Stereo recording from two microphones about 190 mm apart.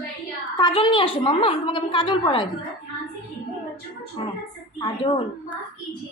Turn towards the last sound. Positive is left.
turn(degrees=25)  # may be behind; listen again after turning